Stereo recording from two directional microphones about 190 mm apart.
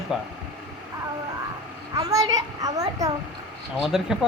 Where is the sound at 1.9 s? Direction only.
20° right (ahead or behind).